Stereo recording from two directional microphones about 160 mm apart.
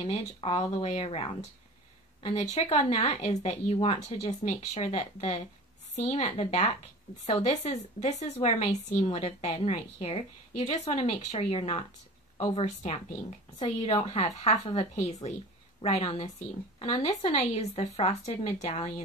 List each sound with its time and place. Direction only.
0.0 s speech: 40° left (ahead or behind)